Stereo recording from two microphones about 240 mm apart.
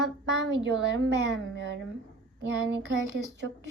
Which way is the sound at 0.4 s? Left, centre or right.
Right.